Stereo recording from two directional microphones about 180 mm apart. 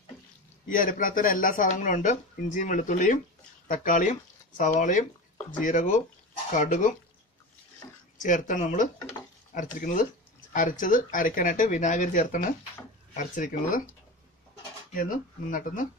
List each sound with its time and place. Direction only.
0.7 s speech: 50° left (ahead or behind)
8.2 s speech: 45° left (ahead or behind)
15.0 s speech: 50° left (ahead or behind)